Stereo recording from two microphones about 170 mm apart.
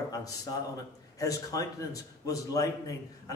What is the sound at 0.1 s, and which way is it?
A man's voice, 20° left (ahead or behind).